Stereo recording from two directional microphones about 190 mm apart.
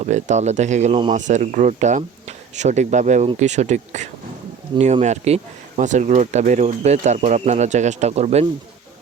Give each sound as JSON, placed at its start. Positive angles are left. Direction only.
{"t": 0.0, "sound": "speech", "side_deg": -40}